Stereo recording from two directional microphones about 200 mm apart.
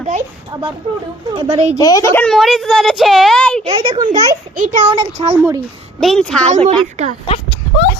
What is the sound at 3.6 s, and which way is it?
Speech, 25° right (ahead or behind).